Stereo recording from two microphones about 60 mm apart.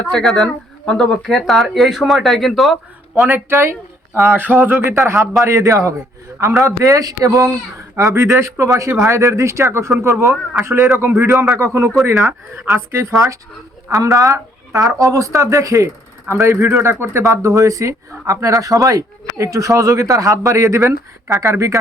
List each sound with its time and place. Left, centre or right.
0.1 s speech: centre
3.3 s speech: right
4.4 s speech: right
5.0 s speech: right
7.3 s speech: right
7.9 s speech: right
13.1 s speech: right
14.3 s speech: right